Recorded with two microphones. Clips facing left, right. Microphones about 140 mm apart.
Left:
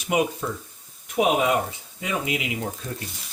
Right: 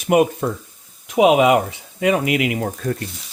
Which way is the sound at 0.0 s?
55° right (ahead or behind).